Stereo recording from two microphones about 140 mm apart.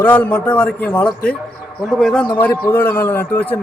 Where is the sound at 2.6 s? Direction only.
15° left (ahead or behind).